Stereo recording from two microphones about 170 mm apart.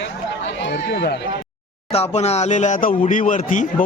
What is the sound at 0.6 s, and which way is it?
Speech, 85° left.